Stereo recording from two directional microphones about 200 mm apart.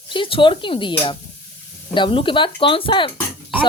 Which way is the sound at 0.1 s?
25° left (ahead or behind).